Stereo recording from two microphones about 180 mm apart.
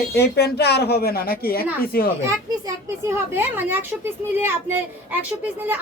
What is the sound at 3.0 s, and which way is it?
Speech, 15° right (ahead or behind).